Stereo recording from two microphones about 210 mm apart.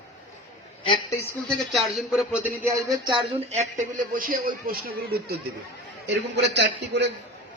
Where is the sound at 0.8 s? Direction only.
25° left (ahead or behind).